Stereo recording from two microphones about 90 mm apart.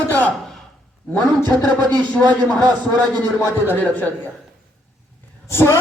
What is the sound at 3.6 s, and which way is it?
Speech, 20° left (ahead or behind).